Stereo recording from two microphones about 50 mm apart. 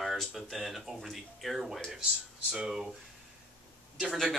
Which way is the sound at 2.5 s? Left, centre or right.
Centre.